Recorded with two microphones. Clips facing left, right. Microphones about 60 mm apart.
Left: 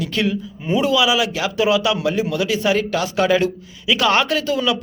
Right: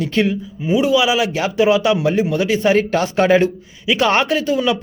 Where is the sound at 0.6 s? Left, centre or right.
Centre.